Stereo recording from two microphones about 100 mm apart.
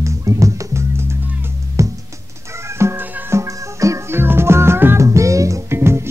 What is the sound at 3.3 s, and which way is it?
Music, 30° right (ahead or behind).